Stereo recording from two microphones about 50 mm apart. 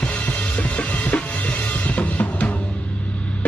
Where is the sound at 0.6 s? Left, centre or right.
Left.